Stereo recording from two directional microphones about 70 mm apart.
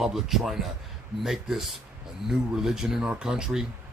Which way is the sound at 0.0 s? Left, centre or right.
Centre.